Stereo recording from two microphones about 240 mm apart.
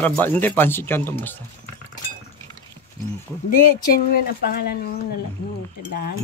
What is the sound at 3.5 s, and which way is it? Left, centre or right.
Speech, left.